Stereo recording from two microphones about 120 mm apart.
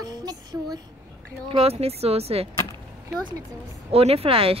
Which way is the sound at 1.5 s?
55° right (ahead or behind).